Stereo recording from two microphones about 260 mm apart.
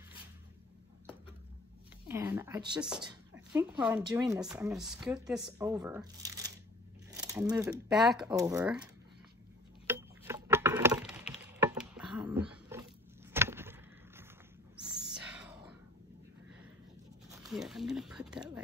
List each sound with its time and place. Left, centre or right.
2.0 s a woman's voice: centre
6.2 s tearing: centre
7.1 s keys jangling: centre
7.9 s speech: centre
9.8 s a sound: centre
13.3 s vehicle: centre
15.1 s whispering: centre
17.4 s a sound: centre